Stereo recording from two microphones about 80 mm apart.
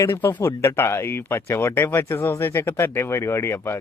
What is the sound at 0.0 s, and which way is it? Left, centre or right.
Speech, left.